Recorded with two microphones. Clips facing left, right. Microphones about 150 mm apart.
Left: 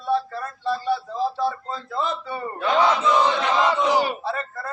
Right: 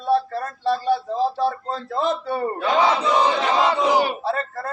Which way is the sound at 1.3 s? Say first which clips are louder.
Right 3 dB; 65° right (ahead or behind).